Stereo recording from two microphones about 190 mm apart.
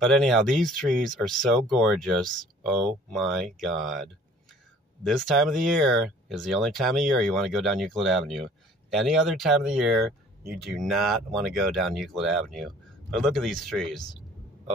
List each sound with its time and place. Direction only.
0.0 s speech: 5° left (ahead or behind)